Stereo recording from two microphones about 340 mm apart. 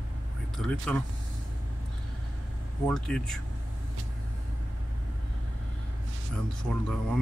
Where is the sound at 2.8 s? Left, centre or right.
Centre.